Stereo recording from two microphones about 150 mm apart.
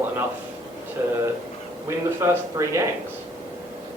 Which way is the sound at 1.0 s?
20° right (ahead or behind).